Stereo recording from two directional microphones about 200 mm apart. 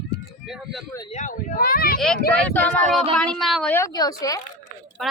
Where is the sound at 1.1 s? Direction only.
35° left (ahead or behind).